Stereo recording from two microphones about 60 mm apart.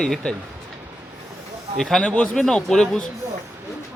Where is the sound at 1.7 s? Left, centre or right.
Centre.